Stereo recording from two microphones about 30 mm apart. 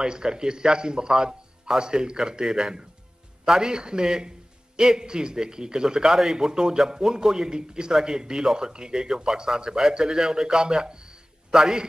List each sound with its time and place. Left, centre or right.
0.0 s a man's voice: right
6.0 s a man's voice: centre
6.4 s a man's voice: centre
11.5 s a man's voice: centre